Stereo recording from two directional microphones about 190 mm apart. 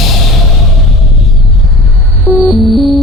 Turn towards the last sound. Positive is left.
turn(degrees=0)  # may be behind; listen again after turning